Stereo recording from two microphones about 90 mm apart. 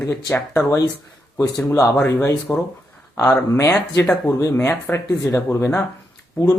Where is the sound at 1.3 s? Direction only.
45° left (ahead or behind).